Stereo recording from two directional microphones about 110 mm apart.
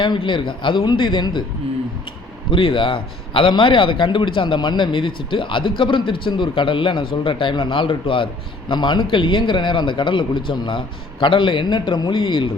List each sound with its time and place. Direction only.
0.0 s a man's voice: 50° left (ahead or behind)
2.5 s a man's voice: 55° left (ahead or behind)